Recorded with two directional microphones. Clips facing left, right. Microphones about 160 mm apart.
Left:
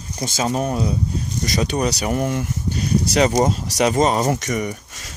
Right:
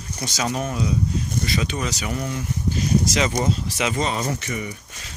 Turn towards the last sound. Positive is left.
turn(degrees=45)  # may be behind; listen again after turning